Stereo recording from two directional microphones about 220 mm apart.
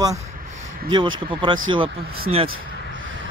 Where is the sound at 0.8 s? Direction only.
20° right (ahead or behind).